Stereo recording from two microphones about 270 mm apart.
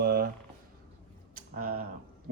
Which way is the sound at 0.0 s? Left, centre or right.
Right.